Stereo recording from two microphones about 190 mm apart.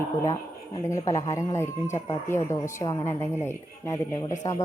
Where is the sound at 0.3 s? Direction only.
15° left (ahead or behind).